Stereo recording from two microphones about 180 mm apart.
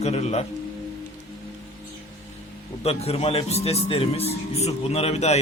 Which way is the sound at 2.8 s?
35° left (ahead or behind).